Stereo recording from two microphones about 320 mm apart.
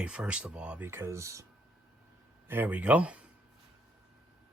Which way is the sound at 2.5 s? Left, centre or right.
Centre.